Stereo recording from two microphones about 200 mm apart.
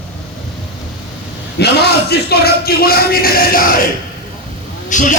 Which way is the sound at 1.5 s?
55° left (ahead or behind).